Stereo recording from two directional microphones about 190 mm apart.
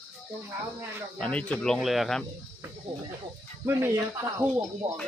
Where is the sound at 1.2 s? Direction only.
5° left (ahead or behind).